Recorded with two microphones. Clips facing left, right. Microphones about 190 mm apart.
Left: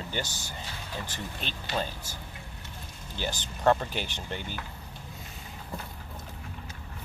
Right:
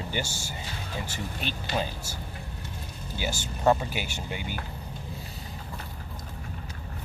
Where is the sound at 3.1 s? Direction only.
10° right (ahead or behind).